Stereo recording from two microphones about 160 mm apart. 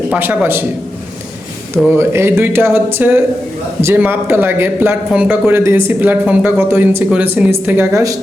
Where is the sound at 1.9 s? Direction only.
15° right (ahead or behind).